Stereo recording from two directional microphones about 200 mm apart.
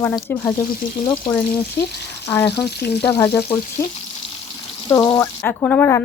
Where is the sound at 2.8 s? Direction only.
55° left (ahead or behind).